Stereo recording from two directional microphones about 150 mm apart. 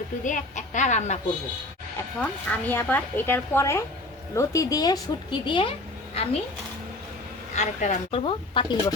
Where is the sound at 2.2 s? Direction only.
10° left (ahead or behind); by 6.3 s 40° left (ahead or behind).